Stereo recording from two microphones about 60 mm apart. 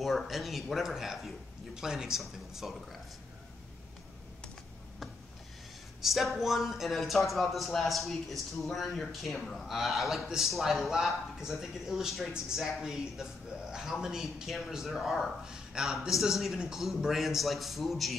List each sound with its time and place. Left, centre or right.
0.0 s speech: centre
5.9 s speech: centre